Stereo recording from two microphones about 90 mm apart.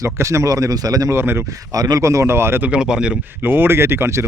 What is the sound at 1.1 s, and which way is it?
Speech, 25° right (ahead or behind).